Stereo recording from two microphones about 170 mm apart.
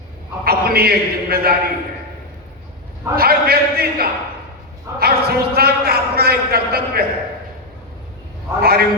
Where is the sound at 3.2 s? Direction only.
65° right (ahead or behind).